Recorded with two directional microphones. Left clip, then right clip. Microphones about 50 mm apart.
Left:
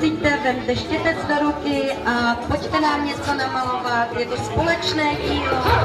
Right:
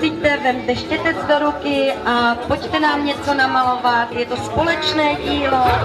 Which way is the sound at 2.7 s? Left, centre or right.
Centre.